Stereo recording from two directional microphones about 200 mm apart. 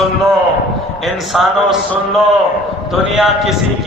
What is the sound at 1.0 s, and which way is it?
A man's voice, centre (ahead or behind).